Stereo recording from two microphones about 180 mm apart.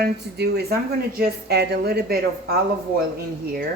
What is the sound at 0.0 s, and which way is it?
A woman's voice, 65° right (ahead or behind).